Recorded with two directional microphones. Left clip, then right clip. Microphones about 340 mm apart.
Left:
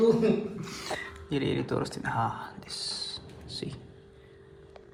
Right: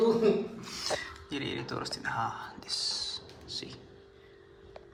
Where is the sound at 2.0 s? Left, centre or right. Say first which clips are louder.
Even; centre.